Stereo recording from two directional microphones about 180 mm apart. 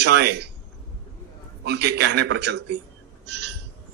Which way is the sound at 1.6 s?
70° right (ahead or behind).